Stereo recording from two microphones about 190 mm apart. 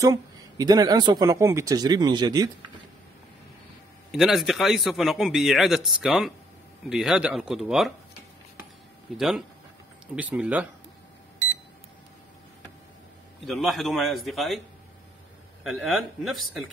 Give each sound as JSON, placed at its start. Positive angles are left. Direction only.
{"t": 0.0, "sound": "speech", "side_deg": -20}
{"t": 4.1, "sound": "a man's voice", "side_deg": 0}
{"t": 9.1, "sound": "a man's voice", "side_deg": 0}
{"t": 13.5, "sound": "a man's voice", "side_deg": 0}
{"t": 15.6, "sound": "a man's voice", "side_deg": 0}